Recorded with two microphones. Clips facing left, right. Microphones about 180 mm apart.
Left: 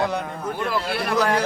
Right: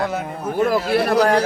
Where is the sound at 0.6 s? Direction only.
45° right (ahead or behind).